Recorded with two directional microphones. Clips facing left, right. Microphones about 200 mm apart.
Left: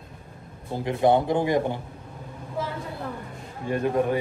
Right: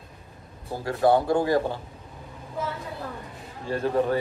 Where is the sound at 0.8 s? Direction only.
20° left (ahead or behind).